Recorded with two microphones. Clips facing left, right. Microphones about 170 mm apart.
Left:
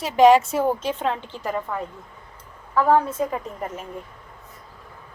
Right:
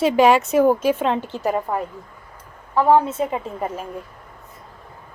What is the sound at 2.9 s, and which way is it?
Speech, 25° right (ahead or behind).